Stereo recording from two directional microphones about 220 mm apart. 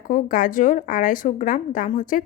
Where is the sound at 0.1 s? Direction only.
40° left (ahead or behind).